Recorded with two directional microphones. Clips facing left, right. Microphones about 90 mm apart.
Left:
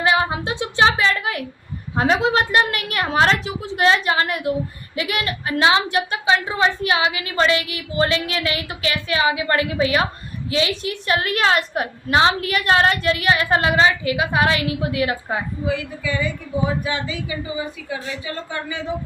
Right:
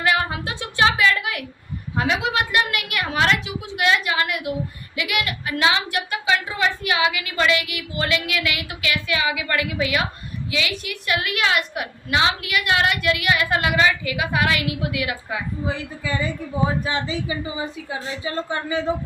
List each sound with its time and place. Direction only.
0.0 s a sound: 25° left (ahead or behind)
2.0 s a woman's voice: 35° left (ahead or behind)
15.6 s a woman's voice: 35° right (ahead or behind)